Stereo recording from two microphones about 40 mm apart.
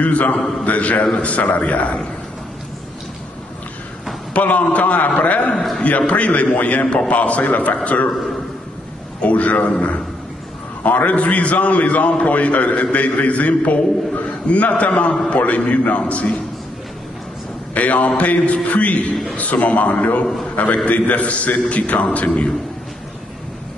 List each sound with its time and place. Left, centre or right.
0.0 s a man's voice: left
0.4 s a man's voice: centre
0.7 s a man's voice: left
4.3 s a man's voice: left
9.2 s a man's voice: left
10.8 s a man's voice: left
17.7 s a man's voice: left